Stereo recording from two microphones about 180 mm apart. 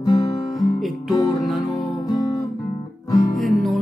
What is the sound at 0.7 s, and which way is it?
Music, centre (ahead or behind).